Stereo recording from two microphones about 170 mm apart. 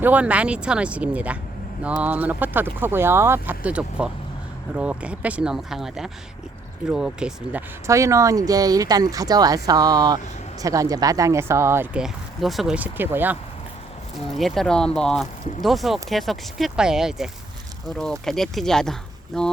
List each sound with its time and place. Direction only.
0.0 s speech: 10° right (ahead or behind)
7.9 s speech: 15° right (ahead or behind)
11.9 s speech: centre (ahead or behind)
14.3 s speech: centre (ahead or behind)